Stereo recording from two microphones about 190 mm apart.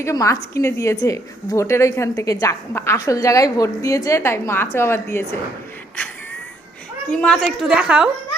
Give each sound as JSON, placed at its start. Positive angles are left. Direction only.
{"t": 0.0, "sound": "a woman's voice", "side_deg": 15}
{"t": 7.1, "sound": "a woman's voice", "side_deg": 5}